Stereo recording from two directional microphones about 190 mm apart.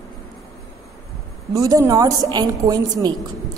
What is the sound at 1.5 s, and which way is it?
A woman's voice, 15° right (ahead or behind).